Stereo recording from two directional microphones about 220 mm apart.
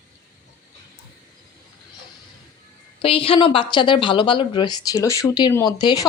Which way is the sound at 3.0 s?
25° left (ahead or behind).